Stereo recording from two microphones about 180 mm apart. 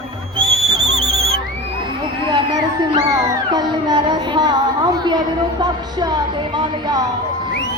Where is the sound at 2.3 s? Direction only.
20° right (ahead or behind).